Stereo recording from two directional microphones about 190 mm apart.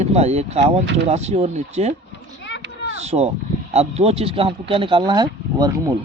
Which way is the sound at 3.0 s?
35° right (ahead or behind).